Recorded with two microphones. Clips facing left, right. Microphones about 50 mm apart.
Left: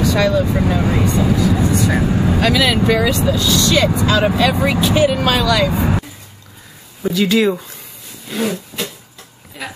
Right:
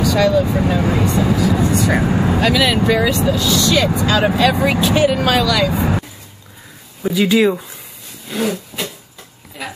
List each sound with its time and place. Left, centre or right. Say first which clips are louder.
0.3 s speech: right 1 dB; centre
1.6 s speech: right 1 dB; right
2.0 s speech: even; right
2.5 s speech: even; centre
7.0 s speech: right 1 dB; centre
9.6 s speech: even; centre